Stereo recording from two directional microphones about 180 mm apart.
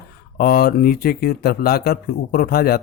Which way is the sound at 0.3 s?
55° left (ahead or behind).